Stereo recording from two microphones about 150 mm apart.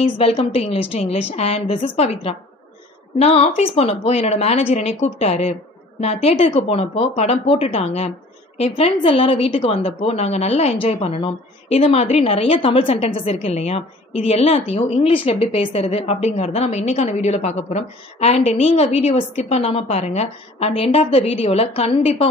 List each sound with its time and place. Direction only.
0.0 s a woman's voice: 40° left (ahead or behind)